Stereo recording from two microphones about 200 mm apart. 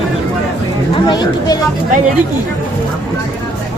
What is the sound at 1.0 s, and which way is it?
Speech, 20° left (ahead or behind).